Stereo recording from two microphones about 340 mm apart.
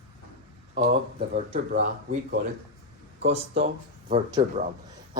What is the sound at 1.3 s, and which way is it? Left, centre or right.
Speech, centre.